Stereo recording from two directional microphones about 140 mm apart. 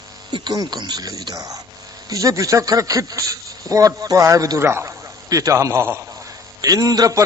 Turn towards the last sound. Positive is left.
turn(degrees=-25)  # may be behind; listen again after turning